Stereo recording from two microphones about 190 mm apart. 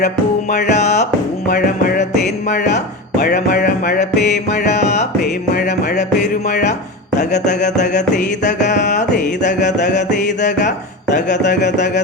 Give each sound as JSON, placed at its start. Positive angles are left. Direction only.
{"t": 0.7, "sound": "music", "side_deg": 35}
{"t": 3.2, "sound": "a sound", "side_deg": 50}
{"t": 4.4, "sound": "music", "side_deg": 35}
{"t": 7.2, "sound": "music", "side_deg": 40}